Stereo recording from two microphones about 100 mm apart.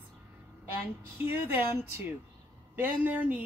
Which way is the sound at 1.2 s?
25° right (ahead or behind).